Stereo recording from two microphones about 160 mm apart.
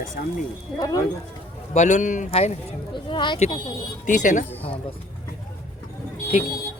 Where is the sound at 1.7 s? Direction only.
50° left (ahead or behind).